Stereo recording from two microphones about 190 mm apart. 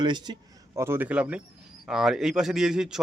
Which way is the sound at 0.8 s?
10° right (ahead or behind).